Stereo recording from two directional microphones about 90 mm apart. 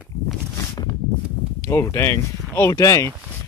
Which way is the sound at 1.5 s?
30° left (ahead or behind).